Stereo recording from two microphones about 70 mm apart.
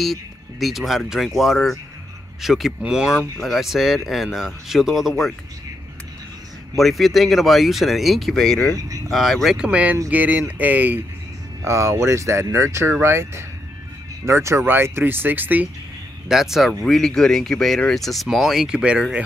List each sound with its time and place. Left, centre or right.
0.0 s speech: centre
6.8 s speech: centre
8.7 s speech: right
9.1 s speech: centre
9.6 s speech: centre
11.6 s speech: right
16.3 s speech: centre
16.8 s speech: centre